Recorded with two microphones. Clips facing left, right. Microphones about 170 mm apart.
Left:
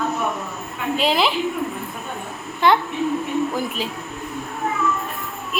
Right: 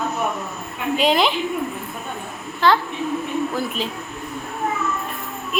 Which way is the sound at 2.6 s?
20° left (ahead or behind).